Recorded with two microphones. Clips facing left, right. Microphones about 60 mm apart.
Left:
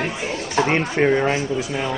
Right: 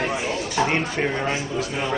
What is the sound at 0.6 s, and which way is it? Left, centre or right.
Speech, centre.